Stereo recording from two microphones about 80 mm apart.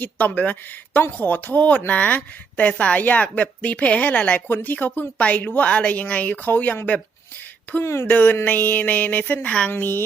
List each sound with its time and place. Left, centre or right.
0.0 s a woman's voice: left
8.0 s a woman's voice: left
9.7 s a woman's voice: left